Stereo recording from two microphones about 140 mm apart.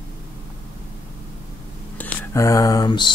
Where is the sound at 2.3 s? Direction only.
20° left (ahead or behind).